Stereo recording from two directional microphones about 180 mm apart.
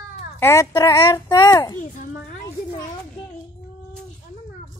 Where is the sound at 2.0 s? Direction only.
45° left (ahead or behind).